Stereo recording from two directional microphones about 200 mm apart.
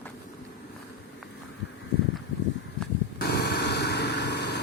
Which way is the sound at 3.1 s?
55° left (ahead or behind).